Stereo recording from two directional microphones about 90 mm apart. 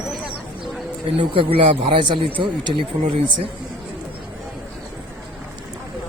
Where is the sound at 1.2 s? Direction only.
75° right (ahead or behind).